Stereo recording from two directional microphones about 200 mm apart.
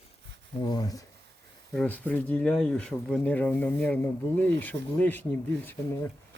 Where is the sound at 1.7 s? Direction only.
10° left (ahead or behind).